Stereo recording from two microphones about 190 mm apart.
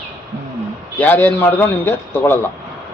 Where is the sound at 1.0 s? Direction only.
10° left (ahead or behind).